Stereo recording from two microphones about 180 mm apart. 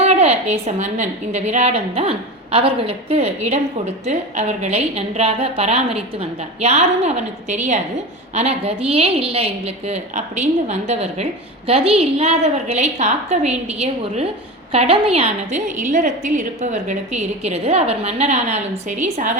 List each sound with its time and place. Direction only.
0.0 s a woman's voice: 35° right (ahead or behind)